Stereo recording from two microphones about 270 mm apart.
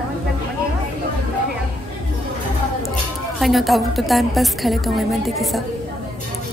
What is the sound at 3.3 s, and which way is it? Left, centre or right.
A woman's voice, centre.